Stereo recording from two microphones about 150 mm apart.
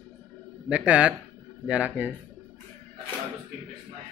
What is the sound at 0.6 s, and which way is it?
A man's voice, 10° right (ahead or behind).